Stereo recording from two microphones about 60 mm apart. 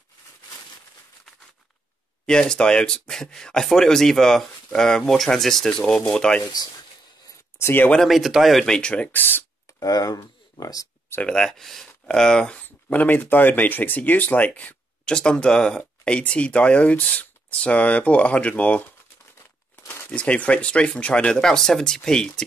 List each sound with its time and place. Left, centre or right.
2.2 s speech: centre
6.4 s speech: left
8.0 s speech: centre
8.6 s speech: centre; by 9.4 s left
9.8 s speech: left
11.2 s speech: centre
12.6 s speech: left
15.1 s speech: centre
20.1 s speech: left